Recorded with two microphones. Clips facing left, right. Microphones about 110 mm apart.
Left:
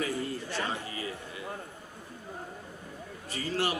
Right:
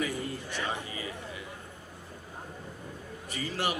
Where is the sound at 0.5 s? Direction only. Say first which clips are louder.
Left 1 dB; 15° right (ahead or behind).